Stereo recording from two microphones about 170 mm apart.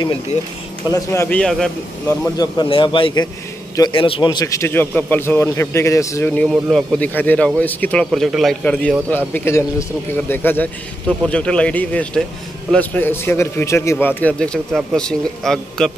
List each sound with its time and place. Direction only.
0.0 s speech: 30° left (ahead or behind)
0.8 s a man's voice: 20° left (ahead or behind)
1.4 s a man's voice: 5° left (ahead or behind)
2.3 s a man's voice: 25° left (ahead or behind); by 15.9 s 5° left (ahead or behind)